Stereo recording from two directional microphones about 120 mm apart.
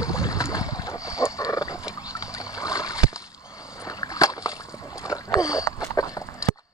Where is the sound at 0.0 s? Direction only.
25° left (ahead or behind).